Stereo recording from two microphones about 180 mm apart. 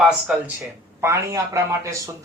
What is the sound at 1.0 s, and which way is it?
Speech, 15° right (ahead or behind).